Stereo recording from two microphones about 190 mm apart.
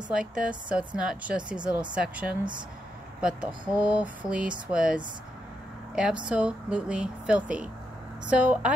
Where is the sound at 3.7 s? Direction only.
5° right (ahead or behind).